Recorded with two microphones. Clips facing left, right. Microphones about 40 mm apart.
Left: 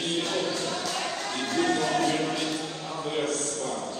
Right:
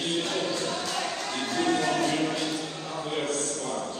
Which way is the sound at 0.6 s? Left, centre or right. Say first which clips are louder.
Even; right.